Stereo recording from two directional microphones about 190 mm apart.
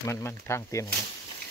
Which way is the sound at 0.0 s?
15° left (ahead or behind).